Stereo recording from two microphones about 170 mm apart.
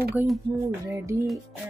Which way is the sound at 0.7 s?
15° right (ahead or behind).